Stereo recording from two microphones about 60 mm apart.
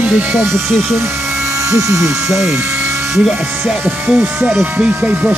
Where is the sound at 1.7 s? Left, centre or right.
Right.